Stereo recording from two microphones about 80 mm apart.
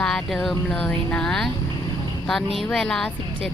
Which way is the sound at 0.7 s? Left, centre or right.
Centre.